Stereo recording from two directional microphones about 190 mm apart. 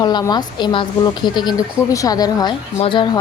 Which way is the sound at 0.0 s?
20° left (ahead or behind).